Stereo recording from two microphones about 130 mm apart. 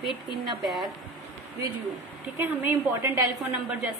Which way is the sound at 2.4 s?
15° right (ahead or behind).